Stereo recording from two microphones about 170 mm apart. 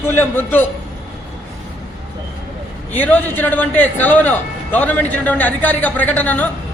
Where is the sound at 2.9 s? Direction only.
10° left (ahead or behind).